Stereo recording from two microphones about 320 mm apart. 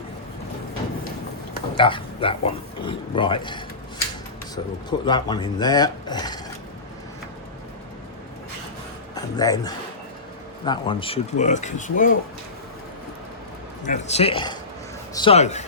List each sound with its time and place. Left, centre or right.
1.7 s speech: centre
9.1 s speech: centre
13.8 s speech: left